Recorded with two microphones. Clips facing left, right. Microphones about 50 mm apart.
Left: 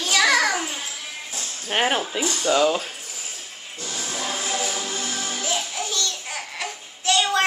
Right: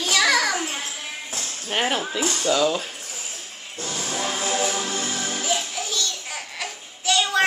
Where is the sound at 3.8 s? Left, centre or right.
Right.